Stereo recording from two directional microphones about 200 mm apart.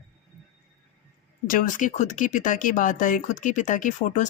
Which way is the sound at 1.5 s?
40° left (ahead or behind).